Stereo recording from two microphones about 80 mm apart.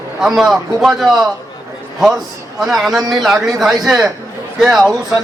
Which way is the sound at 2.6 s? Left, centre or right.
Centre.